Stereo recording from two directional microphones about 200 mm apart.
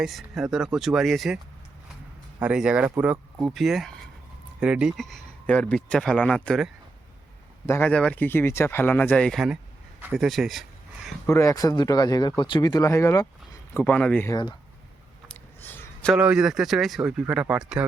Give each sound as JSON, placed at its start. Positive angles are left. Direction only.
{"t": 0.0, "sound": "speech", "side_deg": 0}
{"t": 2.4, "sound": "speech", "side_deg": -5}
{"t": 7.7, "sound": "speech", "side_deg": 10}
{"t": 10.0, "sound": "a sound", "side_deg": -5}
{"t": 11.3, "sound": "speech", "side_deg": 15}
{"t": 15.3, "sound": "a sound", "side_deg": 10}
{"t": 16.1, "sound": "speech", "side_deg": -5}